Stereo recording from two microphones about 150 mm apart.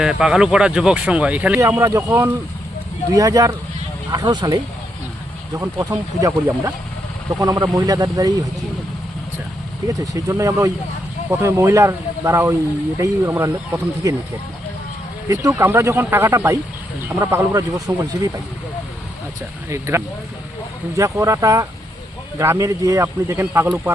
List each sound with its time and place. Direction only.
0.0 s speech: 5° right (ahead or behind); by 8.4 s 25° right (ahead or behind)
10.0 s speech: 20° right (ahead or behind)
15.3 s speech: 20° right (ahead or behind)
17.7 s speech: 10° right (ahead or behind)
20.9 s speech: 20° right (ahead or behind)